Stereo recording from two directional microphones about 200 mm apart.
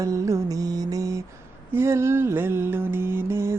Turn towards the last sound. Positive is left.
turn(degrees=-10)  # may be behind; listen again after turning